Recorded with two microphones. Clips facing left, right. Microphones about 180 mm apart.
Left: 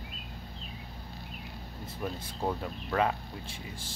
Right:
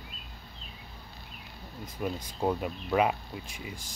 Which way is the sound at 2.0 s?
15° right (ahead or behind).